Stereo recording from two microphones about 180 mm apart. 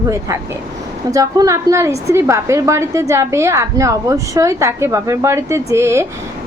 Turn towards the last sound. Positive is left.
turn(degrees=-15)  # may be behind; listen again after turning